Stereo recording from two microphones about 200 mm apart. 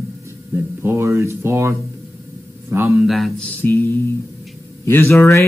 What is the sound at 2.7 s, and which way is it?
Speech, 15° right (ahead or behind).